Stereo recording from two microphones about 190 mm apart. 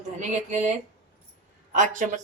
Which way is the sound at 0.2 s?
40° right (ahead or behind).